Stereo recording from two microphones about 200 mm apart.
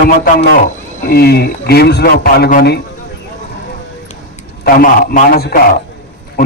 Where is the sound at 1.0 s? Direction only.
50° left (ahead or behind).